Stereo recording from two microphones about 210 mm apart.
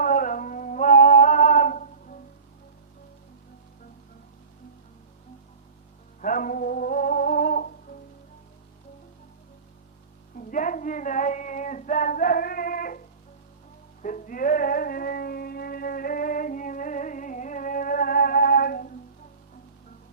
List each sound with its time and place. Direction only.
0.0 s music: 40° left (ahead or behind)
6.2 s humming: 40° left (ahead or behind)
10.3 s child singing: 40° left (ahead or behind)
14.0 s music: 40° left (ahead or behind)